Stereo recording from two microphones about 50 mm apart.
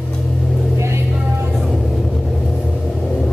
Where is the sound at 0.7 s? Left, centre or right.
Right.